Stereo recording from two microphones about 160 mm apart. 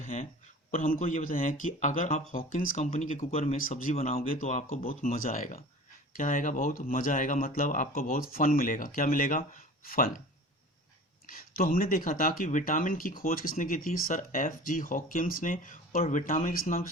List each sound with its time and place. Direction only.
0.0 s a sound: 50° left (ahead or behind)
0.7 s speech: 55° left (ahead or behind)
4.9 s speech: 60° left (ahead or behind)
11.3 s speech: 65° left (ahead or behind)